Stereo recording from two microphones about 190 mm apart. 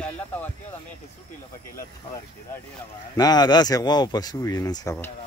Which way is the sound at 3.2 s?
20° left (ahead or behind).